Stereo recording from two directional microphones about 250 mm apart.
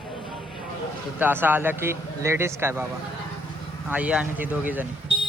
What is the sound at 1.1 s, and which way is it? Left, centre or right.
Speech, centre.